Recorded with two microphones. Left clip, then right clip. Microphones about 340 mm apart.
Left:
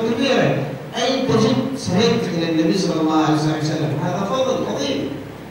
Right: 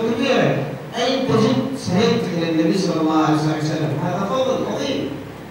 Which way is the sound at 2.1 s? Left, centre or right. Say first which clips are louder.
Even; centre.